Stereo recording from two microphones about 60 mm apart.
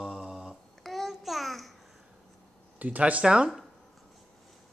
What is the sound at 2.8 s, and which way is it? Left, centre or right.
Speech, right.